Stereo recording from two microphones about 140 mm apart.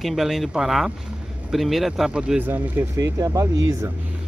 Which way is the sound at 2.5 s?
20° right (ahead or behind).